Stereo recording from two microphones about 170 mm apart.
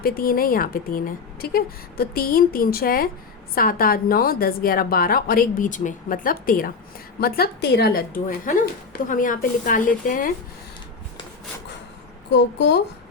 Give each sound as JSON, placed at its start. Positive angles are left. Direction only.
{"t": 0.0, "sound": "a woman's voice", "side_deg": 60}
{"t": 12.3, "sound": "speech", "side_deg": 90}